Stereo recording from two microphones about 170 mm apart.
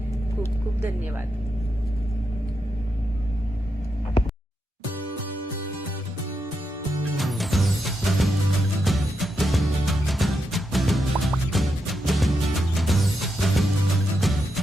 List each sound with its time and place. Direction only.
7.2 s music: centre (ahead or behind)